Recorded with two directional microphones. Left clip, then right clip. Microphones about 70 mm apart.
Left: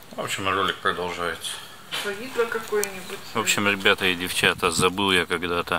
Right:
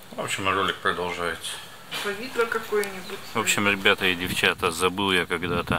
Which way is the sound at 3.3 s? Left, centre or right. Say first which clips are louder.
Even; centre.